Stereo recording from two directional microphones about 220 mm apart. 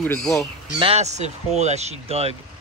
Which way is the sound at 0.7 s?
25° right (ahead or behind).